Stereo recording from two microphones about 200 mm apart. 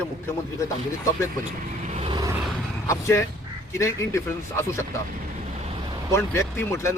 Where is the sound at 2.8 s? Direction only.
15° left (ahead or behind).